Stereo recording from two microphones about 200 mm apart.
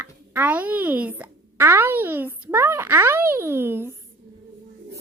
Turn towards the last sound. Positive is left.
turn(degrees=-10)  # may be behind; listen again after turning